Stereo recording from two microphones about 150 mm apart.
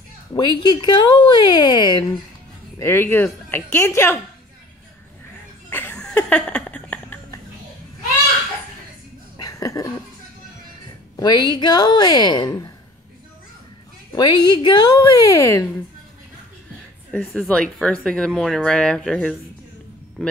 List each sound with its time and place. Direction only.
0.3 s speech: 30° left (ahead or behind)
2.8 s a woman's voice: 15° left (ahead or behind)
5.7 s a sound: 15° left (ahead or behind)
9.4 s a sound: 20° left (ahead or behind)
11.1 s speech: 25° left (ahead or behind)
14.1 s speech: 30° left (ahead or behind)
17.2 s speech: centre (ahead or behind)